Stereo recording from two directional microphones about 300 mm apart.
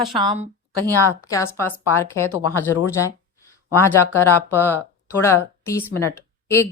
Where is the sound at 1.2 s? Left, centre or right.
Centre.